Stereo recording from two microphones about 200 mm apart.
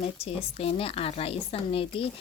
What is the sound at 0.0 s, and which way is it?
Speech, 30° left (ahead or behind).